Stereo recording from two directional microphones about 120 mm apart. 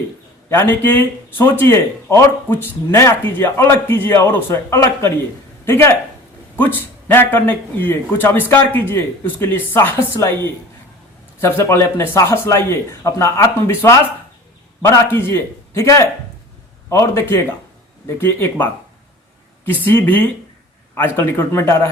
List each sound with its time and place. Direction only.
0.5 s a man's voice: 20° left (ahead or behind)
11.3 s speech: 20° left (ahead or behind)
21.2 s speech: 20° left (ahead or behind)